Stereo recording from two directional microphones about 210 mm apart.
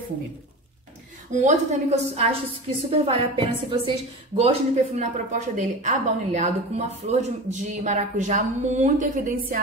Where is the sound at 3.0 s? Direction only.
25° right (ahead or behind).